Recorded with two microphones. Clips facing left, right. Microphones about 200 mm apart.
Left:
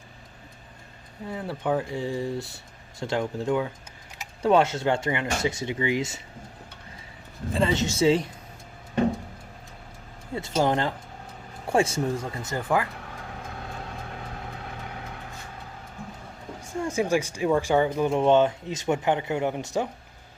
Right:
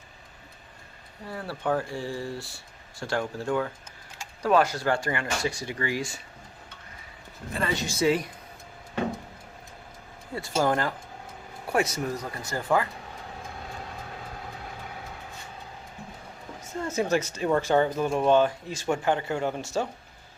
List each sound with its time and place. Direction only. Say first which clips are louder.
1.3 s speech: left 1 dB; 20° left (ahead or behind)
7.5 s speech: left 5 dB; 25° left (ahead or behind)
10.6 s speech: left 1 dB; 25° left (ahead or behind)
16.6 s speech: left 2 dB; 15° left (ahead or behind)